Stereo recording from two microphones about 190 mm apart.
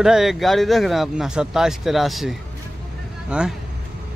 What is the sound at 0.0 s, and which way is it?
Speech, centre (ahead or behind).